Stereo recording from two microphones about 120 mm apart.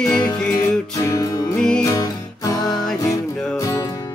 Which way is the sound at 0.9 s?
30° left (ahead or behind).